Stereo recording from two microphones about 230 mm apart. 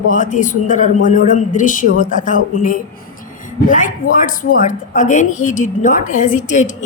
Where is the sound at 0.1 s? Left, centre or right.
Left.